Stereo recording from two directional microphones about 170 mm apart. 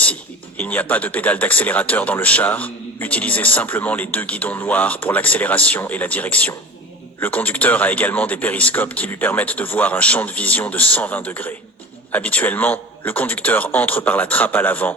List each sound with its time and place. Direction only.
0.0 s speech: 10° left (ahead or behind)